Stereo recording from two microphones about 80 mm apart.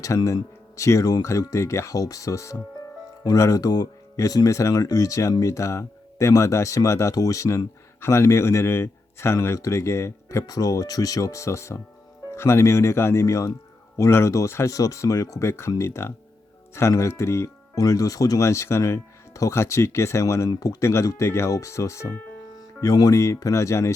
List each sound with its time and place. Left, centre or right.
0.1 s speech: left
10.4 s speech: left
17.7 s speech: left